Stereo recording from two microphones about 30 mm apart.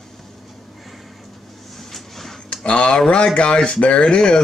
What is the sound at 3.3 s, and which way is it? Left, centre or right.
Speech, left.